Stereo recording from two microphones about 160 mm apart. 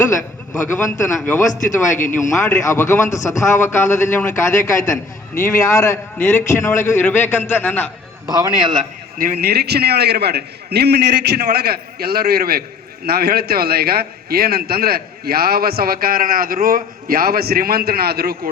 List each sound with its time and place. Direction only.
0.5 s a man's voice: 15° left (ahead or behind)
8.3 s a man's voice: 25° right (ahead or behind)
8.8 s a sound: 60° right (ahead or behind)
9.4 s a man's voice: 90° right